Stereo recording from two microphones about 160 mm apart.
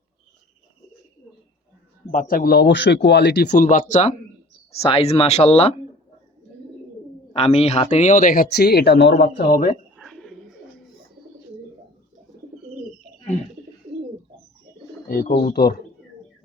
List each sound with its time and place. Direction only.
2.0 s speech: 55° left (ahead or behind); by 3.7 s 90° left
3.7 s speech: 50° left (ahead or behind)
4.7 s speech: 40° left (ahead or behind)
7.3 s speech: 40° left (ahead or behind); by 9.8 s 60° left (ahead or behind)
10.0 s bird: centre (ahead or behind)
15.0 s speech: 75° left (ahead or behind)
15.3 s speech: 45° left (ahead or behind)
15.5 s speech: 80° left